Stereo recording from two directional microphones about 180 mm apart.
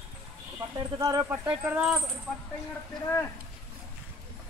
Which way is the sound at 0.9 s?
20° right (ahead or behind).